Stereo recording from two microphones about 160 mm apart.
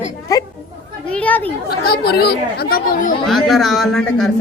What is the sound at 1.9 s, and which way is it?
Speech, 80° left.